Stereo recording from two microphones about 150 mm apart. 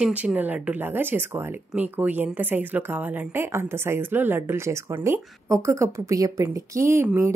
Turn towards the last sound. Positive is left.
turn(degrees=-15)  # may be behind; listen again after turning